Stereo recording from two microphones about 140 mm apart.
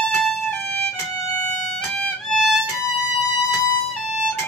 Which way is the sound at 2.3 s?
Centre (ahead or behind).